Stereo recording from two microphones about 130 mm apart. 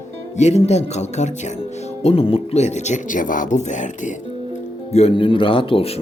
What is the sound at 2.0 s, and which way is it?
Speech, 50° left (ahead or behind).